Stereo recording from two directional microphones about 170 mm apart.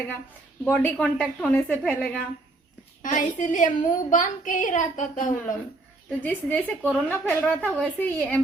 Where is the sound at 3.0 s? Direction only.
50° left (ahead or behind).